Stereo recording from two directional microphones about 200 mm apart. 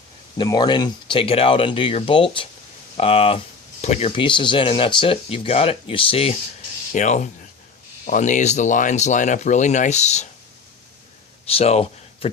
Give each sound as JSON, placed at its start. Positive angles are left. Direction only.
{"t": 0.3, "sound": "speech", "side_deg": 20}
{"t": 11.4, "sound": "speech", "side_deg": 30}